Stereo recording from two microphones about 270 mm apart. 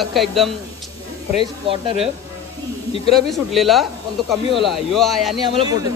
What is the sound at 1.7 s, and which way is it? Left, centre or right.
Speech, centre.